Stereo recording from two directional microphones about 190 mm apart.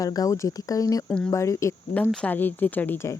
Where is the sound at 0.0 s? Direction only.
20° left (ahead or behind).